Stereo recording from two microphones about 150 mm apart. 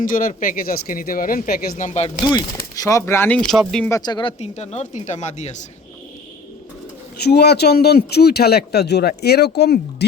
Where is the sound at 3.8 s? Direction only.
25° left (ahead or behind); by 5.5 s 50° left (ahead or behind).